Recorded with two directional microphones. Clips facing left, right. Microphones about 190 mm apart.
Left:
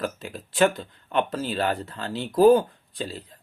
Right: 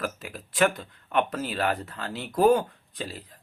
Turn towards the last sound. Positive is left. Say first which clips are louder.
# left 3 dB
turn(degrees=30)  # may be behind; listen again after turning